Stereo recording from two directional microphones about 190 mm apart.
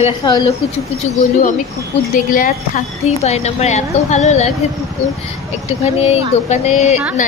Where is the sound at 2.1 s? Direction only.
45° left (ahead or behind).